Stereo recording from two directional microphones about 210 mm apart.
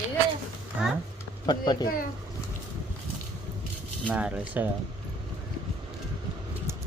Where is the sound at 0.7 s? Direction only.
5° right (ahead or behind).